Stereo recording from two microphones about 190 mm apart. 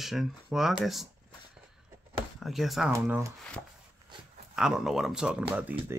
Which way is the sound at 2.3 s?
Centre (ahead or behind).